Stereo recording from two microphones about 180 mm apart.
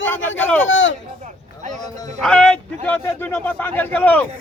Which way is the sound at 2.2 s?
5° left (ahead or behind).